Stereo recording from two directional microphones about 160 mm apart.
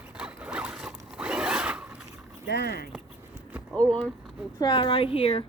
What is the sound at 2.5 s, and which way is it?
Speech, 85° left.